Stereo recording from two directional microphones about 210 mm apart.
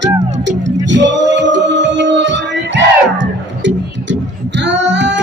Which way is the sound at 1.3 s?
60° right (ahead or behind).